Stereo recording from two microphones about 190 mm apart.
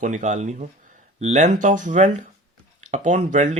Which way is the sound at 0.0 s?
40° right (ahead or behind).